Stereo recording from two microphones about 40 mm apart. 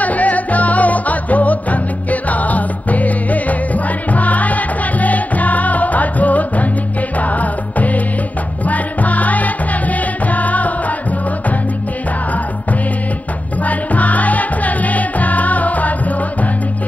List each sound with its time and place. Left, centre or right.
0.0 s music: left
13.7 s music: left